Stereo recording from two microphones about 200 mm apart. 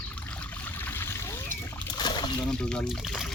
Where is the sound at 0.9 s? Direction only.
10° left (ahead or behind).